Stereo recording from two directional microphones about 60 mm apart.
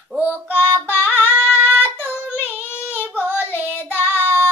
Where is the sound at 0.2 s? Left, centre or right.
Left.